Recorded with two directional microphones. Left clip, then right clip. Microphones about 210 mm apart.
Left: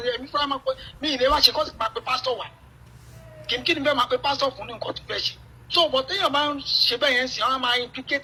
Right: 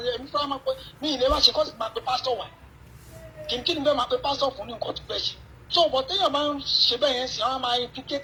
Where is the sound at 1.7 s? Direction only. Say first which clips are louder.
Left 2 dB; 40° left (ahead or behind).